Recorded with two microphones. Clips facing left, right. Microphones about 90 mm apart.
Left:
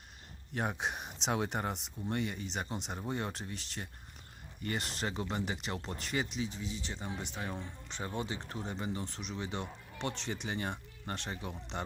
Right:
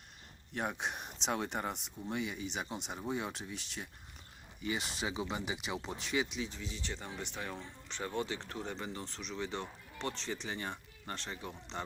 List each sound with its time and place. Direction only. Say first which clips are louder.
0.5 s speech: left 2 dB; centre (ahead or behind)
9.0 s speech: left 2 dB; 50° left (ahead or behind)
9.3 s speech: right 1 dB; 15° left (ahead or behind)
10.5 s speech: left 3 dB; 30° left (ahead or behind)
11.4 s speech: left 1 dB; 20° left (ahead or behind)